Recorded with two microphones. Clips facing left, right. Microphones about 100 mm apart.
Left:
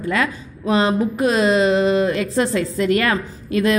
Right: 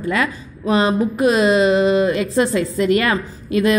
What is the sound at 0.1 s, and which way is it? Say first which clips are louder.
Speech: even; 5° right (ahead or behind).